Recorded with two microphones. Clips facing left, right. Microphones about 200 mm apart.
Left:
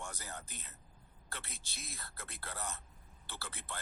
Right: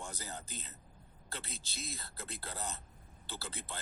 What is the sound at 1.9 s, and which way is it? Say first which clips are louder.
Speech: right 3 dB; 25° right (ahead or behind).